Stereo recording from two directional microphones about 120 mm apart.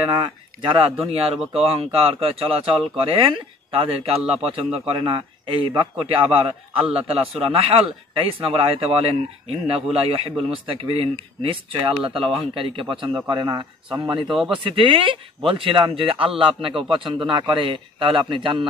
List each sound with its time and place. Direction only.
0.1 s a man's voice: 40° right (ahead or behind)
13.1 s speech: 35° right (ahead or behind)
14.2 s speech: centre (ahead or behind)
14.5 s a man's voice: 45° right (ahead or behind)